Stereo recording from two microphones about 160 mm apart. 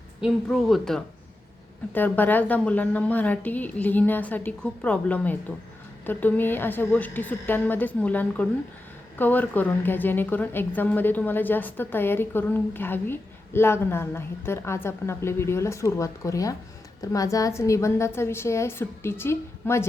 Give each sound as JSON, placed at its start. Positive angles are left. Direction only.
{"t": 0.4, "sound": "speech", "side_deg": 0}
{"t": 1.9, "sound": "a woman's voice", "side_deg": 10}